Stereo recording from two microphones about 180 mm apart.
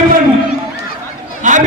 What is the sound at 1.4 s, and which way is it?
Chatter, 45° right (ahead or behind).